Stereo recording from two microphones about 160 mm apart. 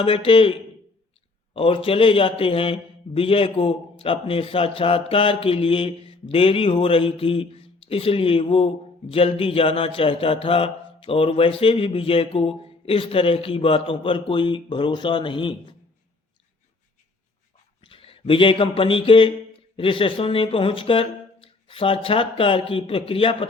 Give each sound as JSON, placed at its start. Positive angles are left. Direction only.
{"t": 0.0, "sound": "a man's voice", "side_deg": 35}
{"t": 1.5, "sound": "a man's voice", "side_deg": 35}
{"t": 17.7, "sound": "a man's voice", "side_deg": 35}